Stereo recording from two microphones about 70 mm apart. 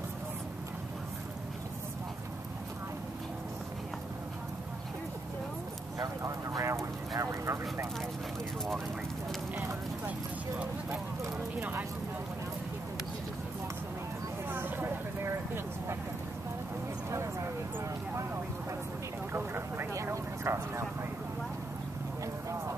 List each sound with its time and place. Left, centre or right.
6.2 s vehicle: right
14.5 s vehicle: right
19.3 s vehicle: right
19.9 s vehicle: right